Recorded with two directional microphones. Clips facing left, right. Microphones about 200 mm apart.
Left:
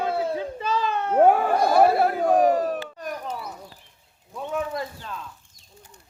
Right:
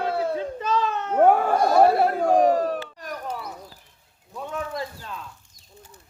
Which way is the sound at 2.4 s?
30° right (ahead or behind).